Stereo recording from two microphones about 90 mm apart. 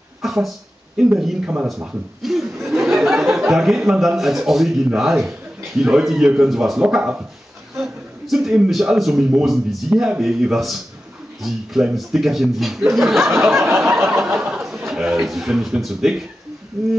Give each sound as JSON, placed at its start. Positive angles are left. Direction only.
{"t": 0.2, "sound": "a sound", "side_deg": 0}
{"t": 1.0, "sound": "speech", "side_deg": -5}
{"t": 1.4, "sound": "speech", "side_deg": -15}
{"t": 1.7, "sound": "speech", "side_deg": 0}
{"t": 7.7, "sound": "a sound", "side_deg": -5}
{"t": 9.4, "sound": "speech", "side_deg": 0}
{"t": 13.2, "sound": "speech", "side_deg": -30}
{"t": 14.9, "sound": "a man's voice", "side_deg": -5}